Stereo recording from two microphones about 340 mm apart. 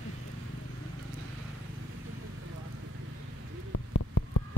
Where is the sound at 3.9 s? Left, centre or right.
Left.